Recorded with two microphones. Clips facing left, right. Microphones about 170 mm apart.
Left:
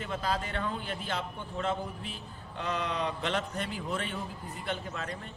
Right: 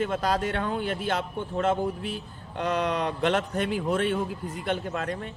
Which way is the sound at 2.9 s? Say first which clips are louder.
Right 7 dB; 55° right (ahead or behind).